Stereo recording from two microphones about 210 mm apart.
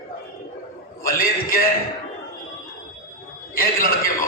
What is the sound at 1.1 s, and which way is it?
Speech, 40° left (ahead or behind).